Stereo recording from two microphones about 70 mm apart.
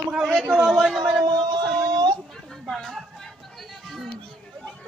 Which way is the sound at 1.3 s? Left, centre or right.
Right.